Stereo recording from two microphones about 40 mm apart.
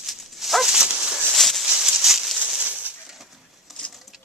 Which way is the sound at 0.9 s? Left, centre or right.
Right.